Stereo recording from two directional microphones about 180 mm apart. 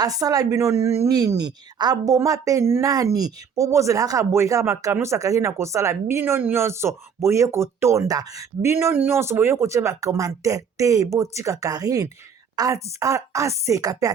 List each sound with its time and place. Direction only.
0.0 s a woman's voice: 20° right (ahead or behind)